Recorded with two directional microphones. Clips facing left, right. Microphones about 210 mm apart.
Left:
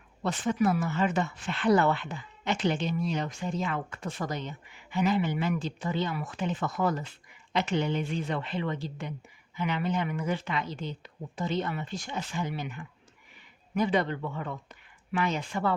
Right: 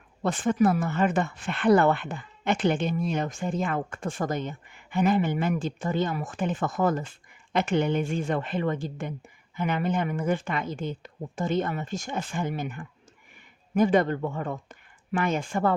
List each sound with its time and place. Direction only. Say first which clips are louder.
0.2 s speech: right 4 dB; 50° right (ahead or behind)